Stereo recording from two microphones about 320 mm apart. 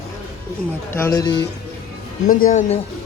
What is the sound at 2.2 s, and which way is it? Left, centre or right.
Speech, left.